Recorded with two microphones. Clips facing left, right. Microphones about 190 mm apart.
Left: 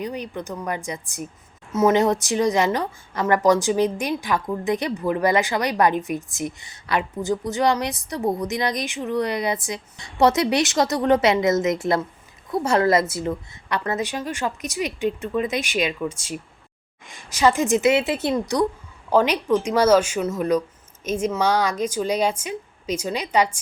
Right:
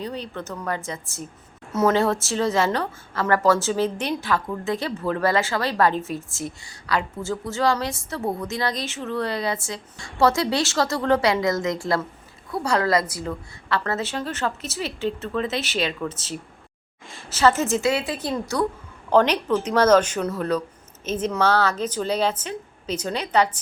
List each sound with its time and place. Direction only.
0.0 s speech: 15° left (ahead or behind)
19.1 s speech: 10° left (ahead or behind)